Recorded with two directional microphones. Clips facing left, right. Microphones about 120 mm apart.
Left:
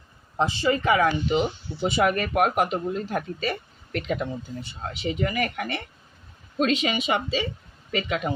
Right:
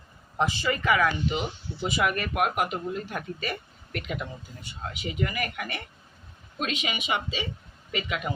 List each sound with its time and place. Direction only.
0.3 s speech: 25° left (ahead or behind)